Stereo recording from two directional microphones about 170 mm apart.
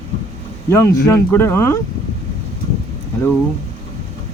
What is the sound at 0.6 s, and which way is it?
Speech, 15° left (ahead or behind).